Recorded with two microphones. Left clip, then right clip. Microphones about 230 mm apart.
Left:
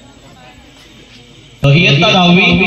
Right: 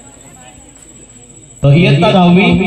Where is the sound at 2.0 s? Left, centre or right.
Right.